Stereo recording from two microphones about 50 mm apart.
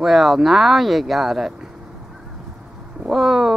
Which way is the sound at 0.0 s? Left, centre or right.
Centre.